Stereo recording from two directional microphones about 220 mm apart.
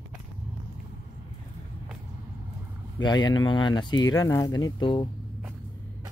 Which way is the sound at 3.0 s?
15° left (ahead or behind).